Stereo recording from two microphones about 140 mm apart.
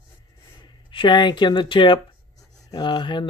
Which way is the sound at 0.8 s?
35° left (ahead or behind).